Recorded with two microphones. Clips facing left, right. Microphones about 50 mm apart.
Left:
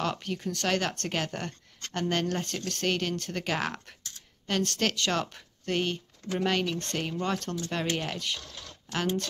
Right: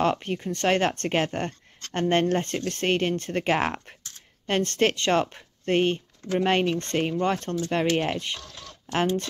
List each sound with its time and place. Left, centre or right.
0.0 s speech: right